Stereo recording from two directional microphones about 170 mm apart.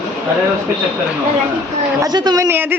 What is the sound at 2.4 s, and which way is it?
Speech, 10° right (ahead or behind).